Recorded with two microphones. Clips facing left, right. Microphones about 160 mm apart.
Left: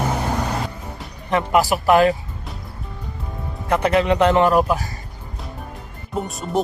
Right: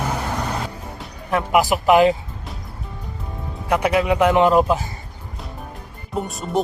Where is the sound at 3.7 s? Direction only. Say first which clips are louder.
Left 1 dB; 5° right (ahead or behind); by 4.8 s 20° right (ahead or behind).